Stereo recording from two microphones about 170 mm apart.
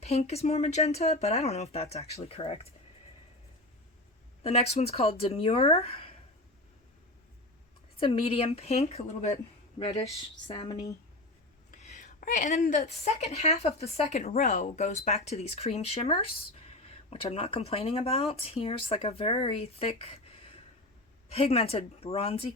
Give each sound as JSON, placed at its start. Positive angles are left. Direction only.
{"t": 0.0, "sound": "a woman's voice", "side_deg": 40}
{"t": 4.4, "sound": "a woman's voice", "side_deg": 35}
{"t": 7.9, "sound": "a woman's voice", "side_deg": 35}
{"t": 10.6, "sound": "speech", "side_deg": 25}
{"t": 11.7, "sound": "a woman's voice", "side_deg": 45}
{"t": 21.2, "sound": "a woman's voice", "side_deg": 35}